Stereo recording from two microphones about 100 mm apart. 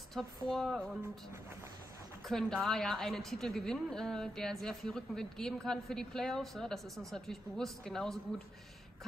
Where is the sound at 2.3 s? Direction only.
5° left (ahead or behind).